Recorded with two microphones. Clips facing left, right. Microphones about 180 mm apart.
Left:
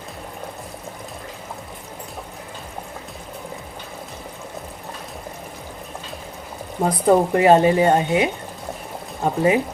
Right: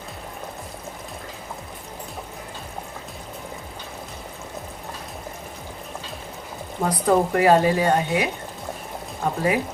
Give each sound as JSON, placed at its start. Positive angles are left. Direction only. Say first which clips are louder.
{"t": 6.8, "sound": "speech", "louder": "left 3 dB", "side_deg": 25}